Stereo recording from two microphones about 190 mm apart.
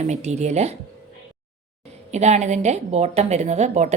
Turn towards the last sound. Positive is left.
turn(degrees=-35)  # may be behind; listen again after turning